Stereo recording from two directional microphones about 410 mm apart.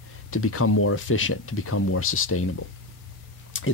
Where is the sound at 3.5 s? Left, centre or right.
Left.